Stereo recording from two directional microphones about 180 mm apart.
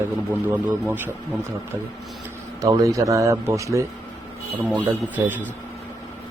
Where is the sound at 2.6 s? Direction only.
15° right (ahead or behind).